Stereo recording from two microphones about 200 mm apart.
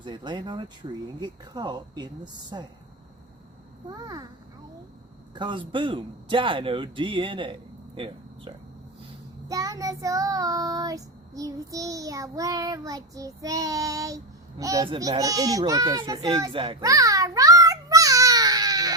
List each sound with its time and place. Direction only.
0.0 s speech: 25° right (ahead or behind)
3.8 s speech: 20° right (ahead or behind)
5.3 s speech: 25° right (ahead or behind)
9.5 s child singing: 20° right (ahead or behind)
14.6 s a child's voice: 15° right (ahead or behind)